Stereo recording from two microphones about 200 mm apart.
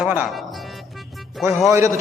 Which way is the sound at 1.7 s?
15° right (ahead or behind).